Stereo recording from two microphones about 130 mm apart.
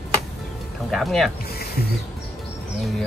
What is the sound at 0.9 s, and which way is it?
Speech, centre (ahead or behind).